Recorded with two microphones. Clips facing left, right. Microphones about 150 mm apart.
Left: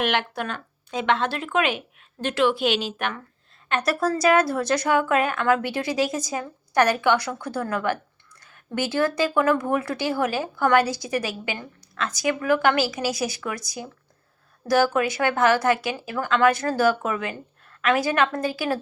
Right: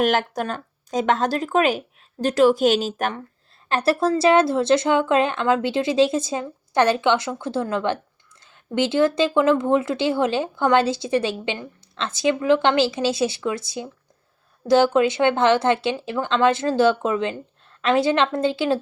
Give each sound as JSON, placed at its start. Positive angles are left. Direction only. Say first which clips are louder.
{"t": 0.0, "sound": "speech", "louder": "right 4 dB", "side_deg": -40}